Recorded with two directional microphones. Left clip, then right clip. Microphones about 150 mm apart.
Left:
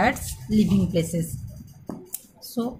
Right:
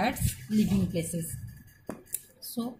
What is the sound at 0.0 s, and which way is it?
Speech, 5° left (ahead or behind).